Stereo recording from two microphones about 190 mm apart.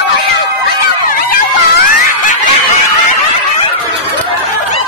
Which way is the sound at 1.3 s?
45° left (ahead or behind).